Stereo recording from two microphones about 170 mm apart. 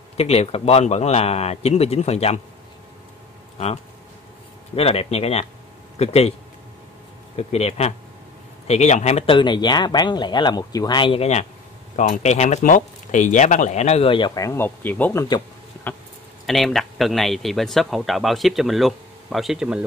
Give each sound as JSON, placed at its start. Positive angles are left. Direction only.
{"t": 0.2, "sound": "speech", "side_deg": 35}
{"t": 3.5, "sound": "speech", "side_deg": 40}
{"t": 7.3, "sound": "speech", "side_deg": 40}
{"t": 16.4, "sound": "speech", "side_deg": 0}